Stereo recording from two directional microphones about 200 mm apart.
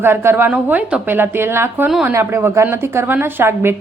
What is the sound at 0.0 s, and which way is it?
A woman's voice, 10° right (ahead or behind).